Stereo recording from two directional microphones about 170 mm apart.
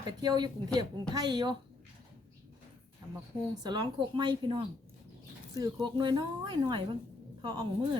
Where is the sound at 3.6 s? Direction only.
25° right (ahead or behind).